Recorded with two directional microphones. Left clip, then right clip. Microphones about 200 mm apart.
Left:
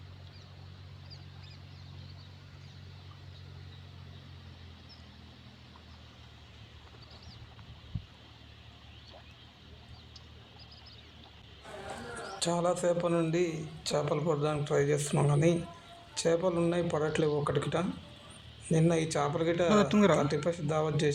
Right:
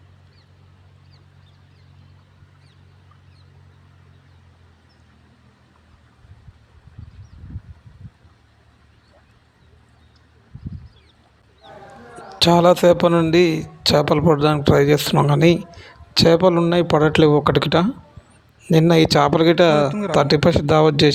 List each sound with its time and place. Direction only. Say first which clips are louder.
12.4 s a man's voice: right 17 dB; 50° right (ahead or behind)
19.9 s speech: even; 10° right (ahead or behind)
20.1 s a man's voice: right 15 dB; 45° right (ahead or behind)